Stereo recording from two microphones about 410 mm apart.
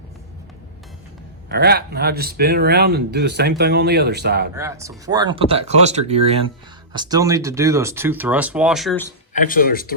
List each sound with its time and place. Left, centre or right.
1.5 s speech: right
4.5 s speech: centre
9.3 s speech: left